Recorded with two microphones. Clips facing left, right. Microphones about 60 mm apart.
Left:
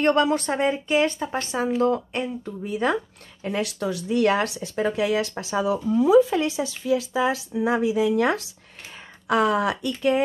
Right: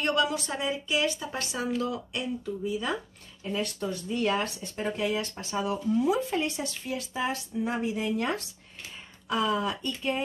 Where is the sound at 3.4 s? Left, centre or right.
Left.